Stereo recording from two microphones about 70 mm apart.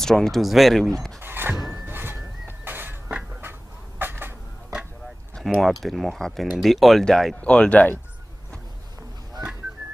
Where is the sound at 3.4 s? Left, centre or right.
Right.